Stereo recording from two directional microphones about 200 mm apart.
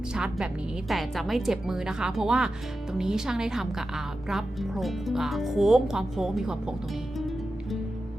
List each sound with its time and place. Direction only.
0.1 s a woman's voice: 5° right (ahead or behind)
7.2 s music: centre (ahead or behind)